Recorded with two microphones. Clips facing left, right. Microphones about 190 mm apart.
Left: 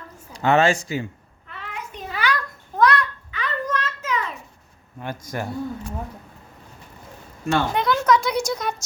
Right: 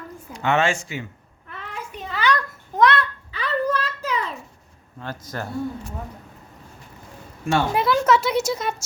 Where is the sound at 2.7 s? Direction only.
20° right (ahead or behind).